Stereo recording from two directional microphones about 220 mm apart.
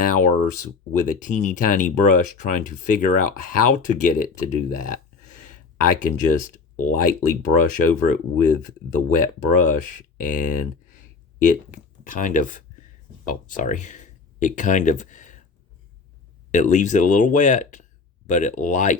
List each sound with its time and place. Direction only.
0.9 s speech: 35° left (ahead or behind)
16.5 s speech: 35° left (ahead or behind)